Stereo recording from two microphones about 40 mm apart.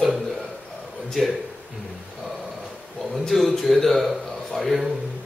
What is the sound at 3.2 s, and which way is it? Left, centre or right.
A man's voice, centre.